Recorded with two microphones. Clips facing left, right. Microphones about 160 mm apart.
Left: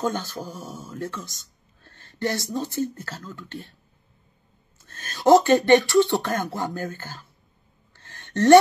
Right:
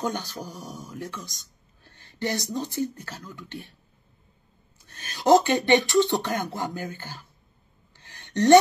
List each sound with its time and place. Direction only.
0.0 s speech: 15° right (ahead or behind)
5.1 s speech: 15° right (ahead or behind)
5.7 s beatboxing: 20° right (ahead or behind)
6.8 s speech: 45° left (ahead or behind)
7.9 s a sound: 15° right (ahead or behind)